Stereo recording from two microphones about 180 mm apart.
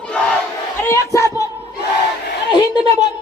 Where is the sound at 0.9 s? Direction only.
15° left (ahead or behind).